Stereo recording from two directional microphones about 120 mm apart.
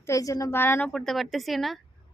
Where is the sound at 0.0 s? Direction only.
25° left (ahead or behind).